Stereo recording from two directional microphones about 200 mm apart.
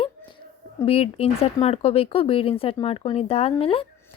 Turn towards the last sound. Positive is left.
turn(degrees=25)  # may be behind; listen again after turning